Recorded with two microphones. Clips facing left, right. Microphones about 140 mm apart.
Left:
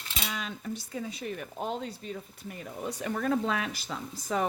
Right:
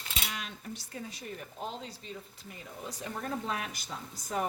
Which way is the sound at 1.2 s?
65° left (ahead or behind).